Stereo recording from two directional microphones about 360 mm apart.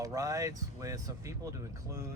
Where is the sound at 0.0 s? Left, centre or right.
Centre.